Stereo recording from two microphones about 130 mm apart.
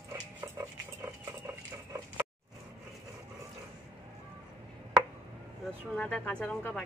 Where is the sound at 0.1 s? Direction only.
20° right (ahead or behind).